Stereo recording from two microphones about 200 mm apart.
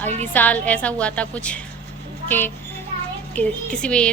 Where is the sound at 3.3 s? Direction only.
5° left (ahead or behind).